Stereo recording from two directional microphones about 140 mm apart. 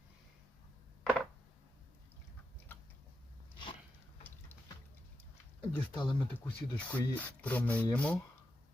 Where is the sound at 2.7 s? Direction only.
15° left (ahead or behind).